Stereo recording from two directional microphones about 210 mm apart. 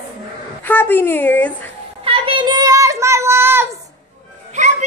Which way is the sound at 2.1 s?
25° right (ahead or behind).